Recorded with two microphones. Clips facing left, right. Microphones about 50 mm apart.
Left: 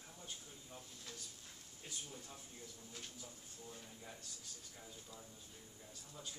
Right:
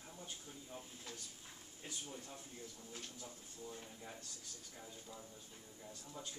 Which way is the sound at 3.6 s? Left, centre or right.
Centre.